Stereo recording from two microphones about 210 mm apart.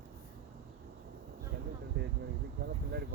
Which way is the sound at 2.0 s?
55° right (ahead or behind).